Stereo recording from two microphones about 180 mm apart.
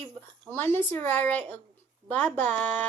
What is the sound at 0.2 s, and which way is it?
Speech, 10° left (ahead or behind).